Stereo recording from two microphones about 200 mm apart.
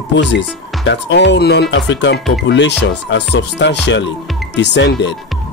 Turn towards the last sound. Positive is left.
turn(degrees=60)  # may be behind; listen again after turning